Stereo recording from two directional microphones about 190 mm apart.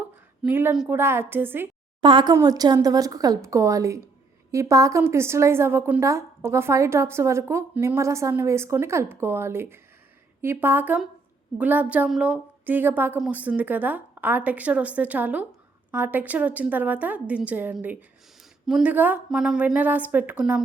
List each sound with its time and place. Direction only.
0.4 s a woman's voice: 10° right (ahead or behind)
2.0 s a woman's voice: 25° right (ahead or behind); by 20.6 s 5° right (ahead or behind)